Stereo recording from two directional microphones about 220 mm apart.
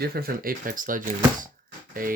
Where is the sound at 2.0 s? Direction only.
40° right (ahead or behind).